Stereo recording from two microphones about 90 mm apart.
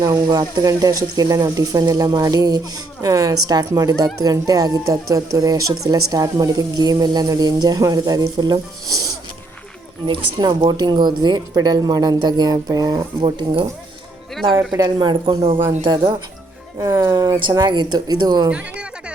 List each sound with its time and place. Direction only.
0.1 s speech: 50° right (ahead or behind)
10.3 s speech: 45° right (ahead or behind)
10.8 s speech: 55° right (ahead or behind)
13.2 s speech: 75° right (ahead or behind)
14.9 s speech: 65° right (ahead or behind)
15.8 s speech: 55° right (ahead or behind)
18.5 s a sound: 10° right (ahead or behind)